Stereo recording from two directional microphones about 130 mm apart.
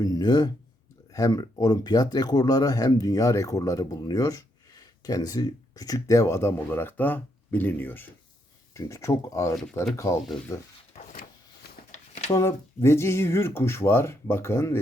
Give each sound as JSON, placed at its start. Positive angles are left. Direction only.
{"t": 0.0, "sound": "speech", "side_deg": 30}
{"t": 11.9, "sound": "a sound", "side_deg": 65}
{"t": 12.3, "sound": "speech", "side_deg": 20}